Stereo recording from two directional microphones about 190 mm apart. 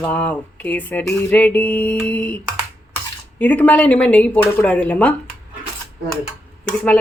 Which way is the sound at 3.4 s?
10° left (ahead or behind).